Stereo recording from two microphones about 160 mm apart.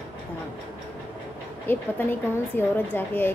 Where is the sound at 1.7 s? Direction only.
15° left (ahead or behind).